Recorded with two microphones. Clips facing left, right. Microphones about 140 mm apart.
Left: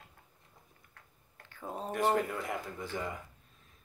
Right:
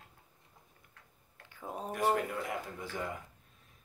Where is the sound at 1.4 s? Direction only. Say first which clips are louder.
Left 1 dB; 10° right (ahead or behind).